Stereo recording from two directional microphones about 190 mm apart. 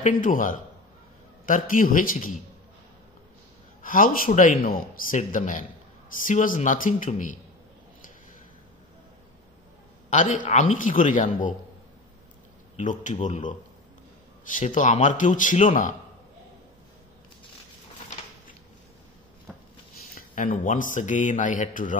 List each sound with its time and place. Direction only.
0.0 s a man's voice: 45° left (ahead or behind)
3.8 s a man's voice: 45° left (ahead or behind)
10.0 s a man's voice: 40° left (ahead or behind)
12.7 s speech: 40° left (ahead or behind)
19.5 s a sound: centre (ahead or behind)
20.2 s a man's voice: 45° left (ahead or behind)